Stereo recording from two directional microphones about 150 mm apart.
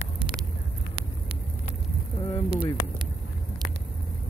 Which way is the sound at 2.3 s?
35° left (ahead or behind).